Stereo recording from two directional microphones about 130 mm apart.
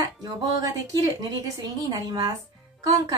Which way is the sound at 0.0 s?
30° right (ahead or behind).